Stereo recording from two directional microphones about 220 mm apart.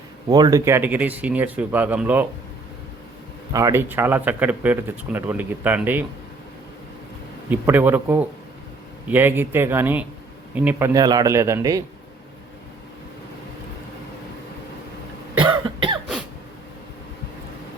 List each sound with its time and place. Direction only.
0.3 s speech: 15° right (ahead or behind)
3.5 s speech: 15° right (ahead or behind)
7.5 s speech: 10° right (ahead or behind)
15.4 s cough: 20° right (ahead or behind)